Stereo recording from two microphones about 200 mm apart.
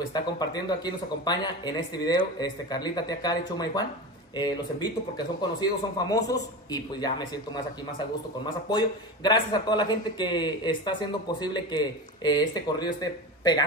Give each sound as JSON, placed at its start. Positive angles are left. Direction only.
{"t": 0.1, "sound": "a man's voice", "side_deg": 20}
{"t": 8.6, "sound": "a man's voice", "side_deg": 20}